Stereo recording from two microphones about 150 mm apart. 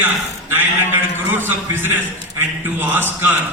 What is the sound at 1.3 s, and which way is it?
A man's voice, 15° right (ahead or behind).